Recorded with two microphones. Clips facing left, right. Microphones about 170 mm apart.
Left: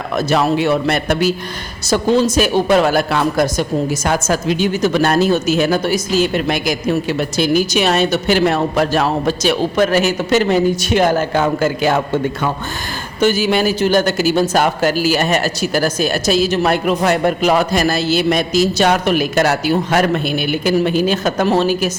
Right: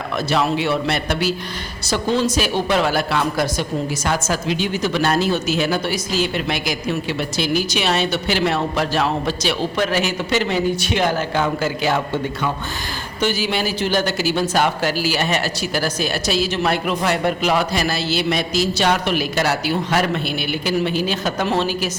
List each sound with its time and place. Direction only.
0.2 s a woman's voice: 45° left (ahead or behind)